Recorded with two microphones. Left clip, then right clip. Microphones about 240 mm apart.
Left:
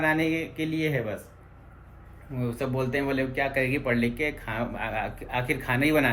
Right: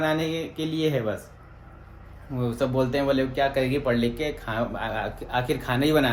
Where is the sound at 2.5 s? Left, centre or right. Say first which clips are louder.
Right 4 dB; centre.